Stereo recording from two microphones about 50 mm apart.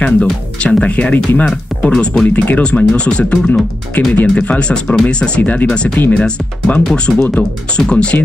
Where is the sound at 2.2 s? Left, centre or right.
Left.